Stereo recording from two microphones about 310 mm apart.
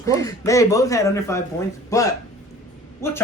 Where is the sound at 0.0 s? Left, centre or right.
Centre.